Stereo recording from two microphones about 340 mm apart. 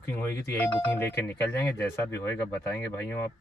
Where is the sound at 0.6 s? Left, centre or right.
Centre.